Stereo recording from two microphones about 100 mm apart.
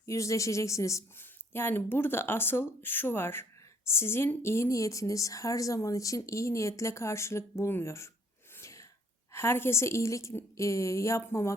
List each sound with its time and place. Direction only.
0.0 s speech: 30° left (ahead or behind)
8.5 s sneeze: 30° left (ahead or behind)
9.3 s speech: 25° left (ahead or behind)